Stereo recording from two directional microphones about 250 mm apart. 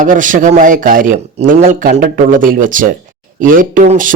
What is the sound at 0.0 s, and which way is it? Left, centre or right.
Speech, right.